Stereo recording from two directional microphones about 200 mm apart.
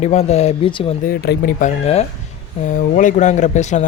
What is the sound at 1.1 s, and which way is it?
Speech, 50° left (ahead or behind).